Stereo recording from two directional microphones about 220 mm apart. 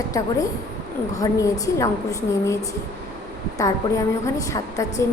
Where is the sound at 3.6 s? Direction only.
15° left (ahead or behind).